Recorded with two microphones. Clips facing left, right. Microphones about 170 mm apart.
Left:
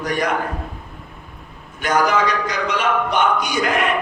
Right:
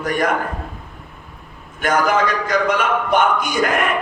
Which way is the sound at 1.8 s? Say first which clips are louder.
Right 1 dB; 50° right (ahead or behind).